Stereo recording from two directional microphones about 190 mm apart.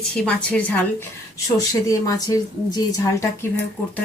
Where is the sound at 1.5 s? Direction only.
20° left (ahead or behind).